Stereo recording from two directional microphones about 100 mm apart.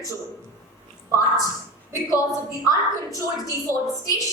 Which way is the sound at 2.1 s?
35° left (ahead or behind).